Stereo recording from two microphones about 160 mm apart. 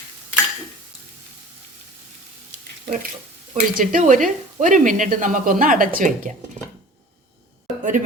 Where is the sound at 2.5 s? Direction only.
65° right (ahead or behind).